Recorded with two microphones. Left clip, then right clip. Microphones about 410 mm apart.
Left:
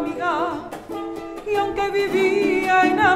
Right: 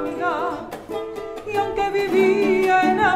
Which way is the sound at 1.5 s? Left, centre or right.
Centre.